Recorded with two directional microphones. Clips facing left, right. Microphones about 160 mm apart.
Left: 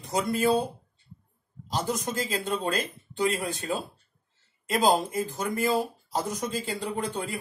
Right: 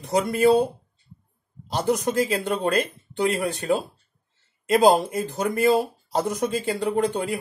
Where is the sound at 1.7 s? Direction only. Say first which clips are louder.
Right 6 dB; 65° right (ahead or behind).